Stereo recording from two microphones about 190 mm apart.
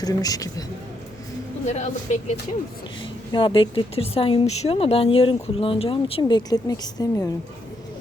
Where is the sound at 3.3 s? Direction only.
25° left (ahead or behind).